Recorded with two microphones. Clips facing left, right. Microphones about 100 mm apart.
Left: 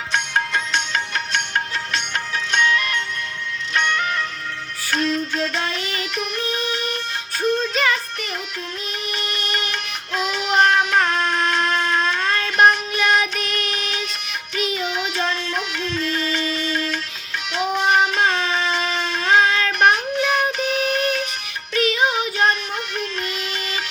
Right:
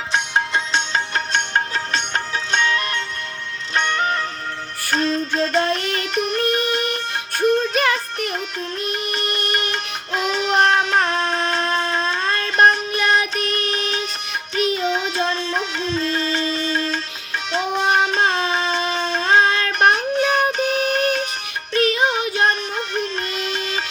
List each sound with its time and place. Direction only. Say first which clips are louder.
0.1 s music: right 1 dB; 25° right (ahead or behind); by 6.1 s 50° right (ahead or behind)
6.1 s music: right 5 dB; 35° right (ahead or behind)
6.4 s music: right 5 dB; 55° right (ahead or behind)
10.3 s music: even; 25° right (ahead or behind)
18.1 s child singing: right 1 dB; 30° right (ahead or behind)
21.7 s music: right 1 dB; 40° right (ahead or behind)